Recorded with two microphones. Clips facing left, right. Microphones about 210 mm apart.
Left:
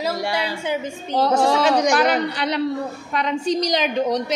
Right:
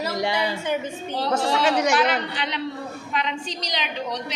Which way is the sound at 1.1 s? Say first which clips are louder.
Left 6 dB; 45° left (ahead or behind).